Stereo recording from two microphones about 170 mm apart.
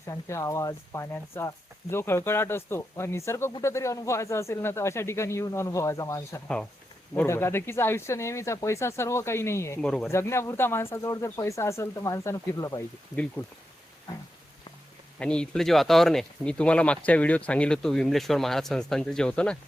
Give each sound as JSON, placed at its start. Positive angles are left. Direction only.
{"t": 0.1, "sound": "speech", "side_deg": 15}
{"t": 9.8, "sound": "speech", "side_deg": 5}
{"t": 10.1, "sound": "speech", "side_deg": 15}
{"t": 15.2, "sound": "speech", "side_deg": 5}